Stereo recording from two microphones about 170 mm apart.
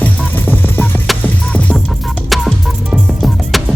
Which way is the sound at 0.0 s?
10° left (ahead or behind).